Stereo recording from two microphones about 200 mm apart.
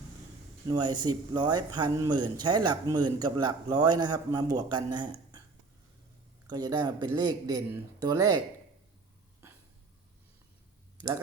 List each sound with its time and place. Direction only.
0.7 s a man's voice: 20° right (ahead or behind)
6.5 s a man's voice: 20° right (ahead or behind)